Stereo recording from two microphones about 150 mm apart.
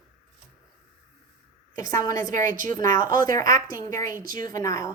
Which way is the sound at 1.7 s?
20° left (ahead or behind).